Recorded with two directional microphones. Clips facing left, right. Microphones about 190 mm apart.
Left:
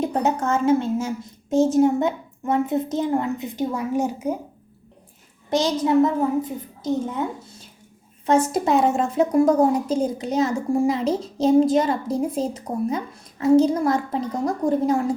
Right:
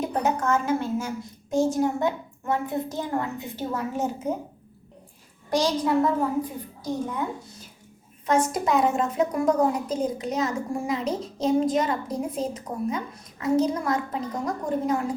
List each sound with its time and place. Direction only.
0.0 s a woman's voice: 25° left (ahead or behind); by 4.4 s 10° left (ahead or behind)
5.5 s a child's voice: 20° left (ahead or behind)
8.3 s a woman's voice: 30° left (ahead or behind)